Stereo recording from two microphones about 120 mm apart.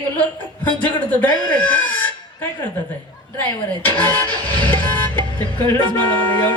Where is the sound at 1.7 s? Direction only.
15° left (ahead or behind).